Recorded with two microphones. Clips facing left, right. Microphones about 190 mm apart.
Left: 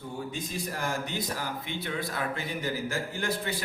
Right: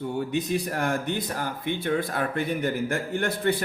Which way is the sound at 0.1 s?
70° right (ahead or behind).